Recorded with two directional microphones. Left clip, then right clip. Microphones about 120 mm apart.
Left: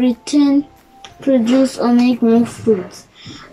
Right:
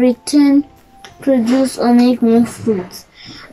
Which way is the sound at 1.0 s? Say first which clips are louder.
Even; 15° left (ahead or behind).